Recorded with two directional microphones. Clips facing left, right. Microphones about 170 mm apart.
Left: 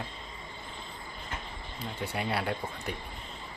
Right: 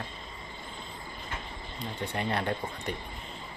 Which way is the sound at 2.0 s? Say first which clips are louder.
Right 1 dB; 5° left (ahead or behind).